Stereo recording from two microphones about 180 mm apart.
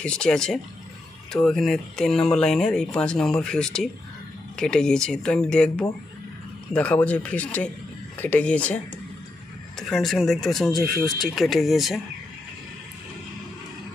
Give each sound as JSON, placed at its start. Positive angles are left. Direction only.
{"t": 0.0, "sound": "speech", "side_deg": 5}